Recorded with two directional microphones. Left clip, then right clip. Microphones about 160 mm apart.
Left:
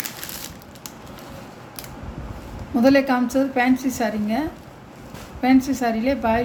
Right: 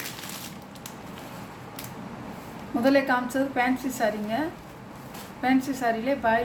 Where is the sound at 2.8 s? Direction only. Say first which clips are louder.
Left 5 dB; 60° left (ahead or behind).